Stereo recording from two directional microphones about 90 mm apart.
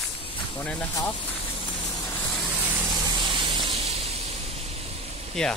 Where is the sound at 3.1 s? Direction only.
60° right (ahead or behind).